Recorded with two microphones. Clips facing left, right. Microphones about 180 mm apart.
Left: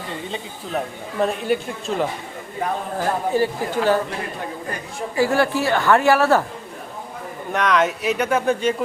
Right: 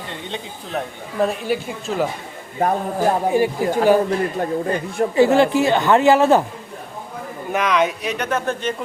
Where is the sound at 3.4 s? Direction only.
15° right (ahead or behind).